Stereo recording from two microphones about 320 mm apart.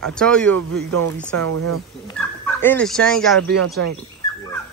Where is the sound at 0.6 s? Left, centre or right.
Right.